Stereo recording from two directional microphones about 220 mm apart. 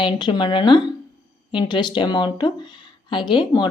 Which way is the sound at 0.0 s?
20° left (ahead or behind).